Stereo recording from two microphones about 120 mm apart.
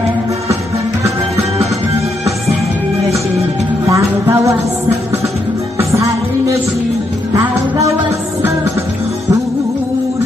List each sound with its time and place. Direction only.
3.8 s music: 25° right (ahead or behind)
7.3 s music: 25° right (ahead or behind)